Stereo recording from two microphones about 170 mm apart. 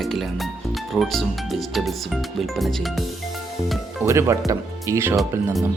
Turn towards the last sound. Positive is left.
turn(degrees=-15)  # may be behind; listen again after turning